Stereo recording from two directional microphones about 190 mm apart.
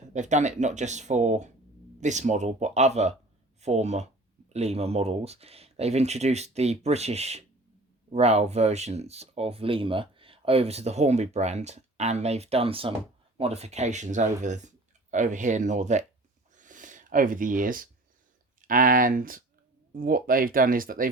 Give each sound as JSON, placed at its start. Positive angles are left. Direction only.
{"t": 0.1, "sound": "speech", "side_deg": -40}
{"t": 16.6, "sound": "a sound", "side_deg": -45}
{"t": 18.7, "sound": "speech", "side_deg": -45}